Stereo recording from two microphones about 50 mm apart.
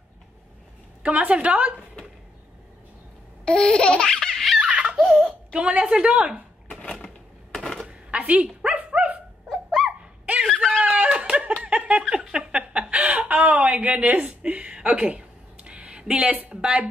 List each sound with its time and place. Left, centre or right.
1.0 s a woman's voice: right
3.4 s laughter: centre
4.6 s giggle: right
4.9 s speech: centre
6.7 s a sound: centre
7.8 s a sound: centre
8.2 s speech: right
8.6 s dog: right
9.5 s dog: centre
10.8 s a sound: right
11.1 s laughter: right
11.6 s a sound: right